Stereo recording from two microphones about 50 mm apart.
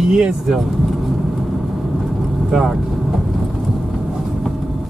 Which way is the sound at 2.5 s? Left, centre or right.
Centre.